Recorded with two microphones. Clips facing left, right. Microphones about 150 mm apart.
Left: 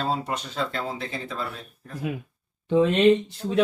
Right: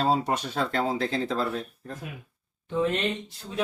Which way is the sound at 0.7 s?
70° right (ahead or behind).